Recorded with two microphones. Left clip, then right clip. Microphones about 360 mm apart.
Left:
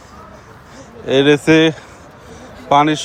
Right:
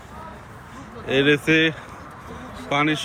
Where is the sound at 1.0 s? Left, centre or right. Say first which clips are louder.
Left 7 dB; centre.